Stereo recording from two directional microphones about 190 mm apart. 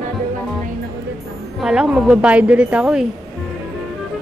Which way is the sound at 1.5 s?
5° right (ahead or behind).